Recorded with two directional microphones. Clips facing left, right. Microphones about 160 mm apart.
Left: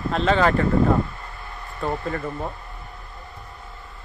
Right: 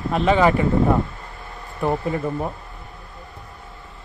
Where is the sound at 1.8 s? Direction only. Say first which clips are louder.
Right 4 dB; 15° right (ahead or behind).